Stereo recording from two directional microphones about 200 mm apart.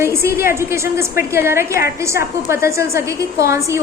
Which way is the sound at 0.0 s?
15° right (ahead or behind).